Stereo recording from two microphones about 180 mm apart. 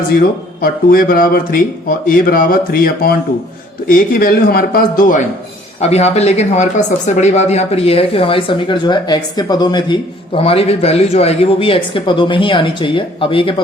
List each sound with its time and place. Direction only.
0.2 s speech: 55° left (ahead or behind)
5.8 s speech: 35° left (ahead or behind)